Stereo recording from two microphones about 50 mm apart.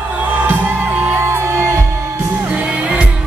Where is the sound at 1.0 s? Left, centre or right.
Right.